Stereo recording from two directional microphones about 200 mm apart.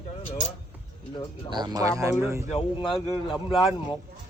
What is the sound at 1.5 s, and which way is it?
Speech, 20° right (ahead or behind).